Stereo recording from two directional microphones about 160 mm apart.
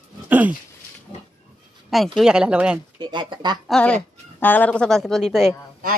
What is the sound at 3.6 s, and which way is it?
Speech, 5° left (ahead or behind).